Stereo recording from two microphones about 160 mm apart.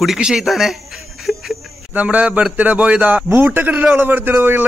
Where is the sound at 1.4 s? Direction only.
Centre (ahead or behind).